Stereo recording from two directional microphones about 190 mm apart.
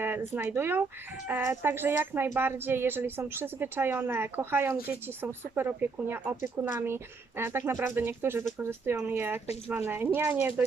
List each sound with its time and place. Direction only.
0.0 s speech: 10° right (ahead or behind)